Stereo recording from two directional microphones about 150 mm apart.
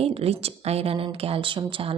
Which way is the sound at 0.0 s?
40° right (ahead or behind).